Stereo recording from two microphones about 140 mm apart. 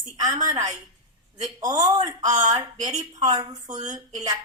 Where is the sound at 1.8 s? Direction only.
30° right (ahead or behind).